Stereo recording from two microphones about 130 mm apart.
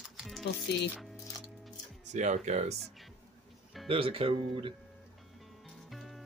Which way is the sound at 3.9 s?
45° right (ahead or behind).